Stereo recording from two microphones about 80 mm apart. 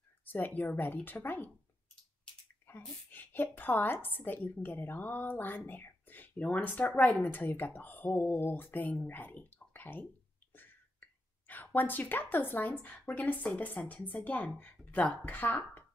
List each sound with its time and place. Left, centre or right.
0.2 s a woman's voice: left
2.7 s a sound: left
3.1 s speech: left
5.7 s a sound: left
6.4 s speech: centre
10.5 s whispering: left
12.8 s speech: centre